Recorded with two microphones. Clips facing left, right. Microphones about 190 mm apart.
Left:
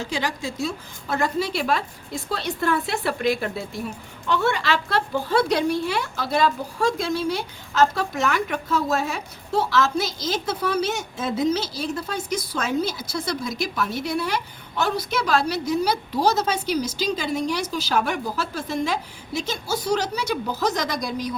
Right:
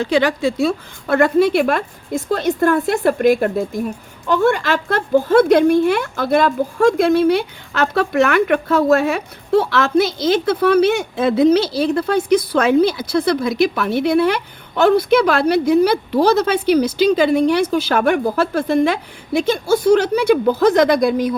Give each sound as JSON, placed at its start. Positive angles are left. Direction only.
{"t": 0.0, "sound": "a woman's voice", "side_deg": -65}